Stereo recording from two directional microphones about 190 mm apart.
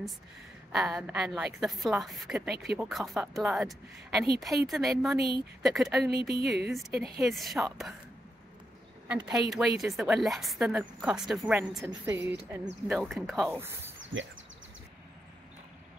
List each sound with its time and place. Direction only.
0.7 s a woman's voice: centre (ahead or behind)
2.5 s speech: 60° right (ahead or behind)
2.8 s a woman's voice: centre (ahead or behind)
6.0 s speech: 55° right (ahead or behind)
6.6 s a woman's voice: centre (ahead or behind)
9.0 s a woman's voice: 5° right (ahead or behind)
13.5 s speech: 10° right (ahead or behind)
14.1 s speech: 85° right